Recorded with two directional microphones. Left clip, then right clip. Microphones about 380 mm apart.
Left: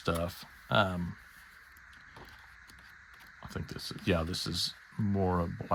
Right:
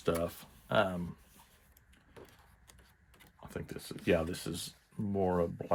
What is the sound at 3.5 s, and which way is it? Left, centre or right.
Speech, centre.